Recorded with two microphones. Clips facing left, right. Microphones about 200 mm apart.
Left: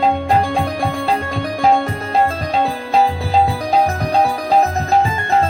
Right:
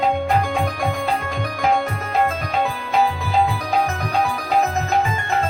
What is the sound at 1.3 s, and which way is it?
Music, 35° left (ahead or behind).